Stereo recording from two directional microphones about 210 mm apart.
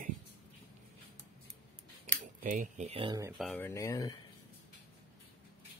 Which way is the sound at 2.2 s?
40° right (ahead or behind).